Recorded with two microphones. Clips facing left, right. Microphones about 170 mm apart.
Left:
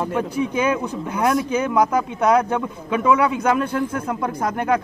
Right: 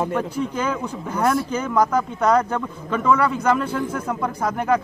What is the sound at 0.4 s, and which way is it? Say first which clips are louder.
A man's voice: left 3 dB; 15° left (ahead or behind).